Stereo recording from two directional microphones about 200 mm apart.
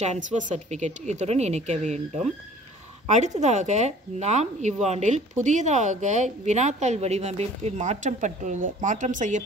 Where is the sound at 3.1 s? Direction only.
35° right (ahead or behind).